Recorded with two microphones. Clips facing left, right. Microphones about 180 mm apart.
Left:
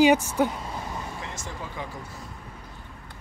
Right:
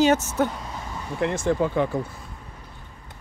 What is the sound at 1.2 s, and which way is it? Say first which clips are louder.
Speech: right 15 dB; 60° right (ahead or behind).